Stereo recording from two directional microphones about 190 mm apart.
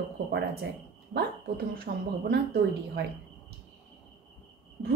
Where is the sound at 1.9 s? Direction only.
55° right (ahead or behind).